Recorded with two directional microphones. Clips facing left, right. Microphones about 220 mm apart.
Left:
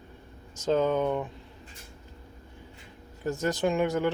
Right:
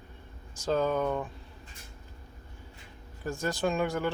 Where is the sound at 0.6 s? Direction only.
20° left (ahead or behind).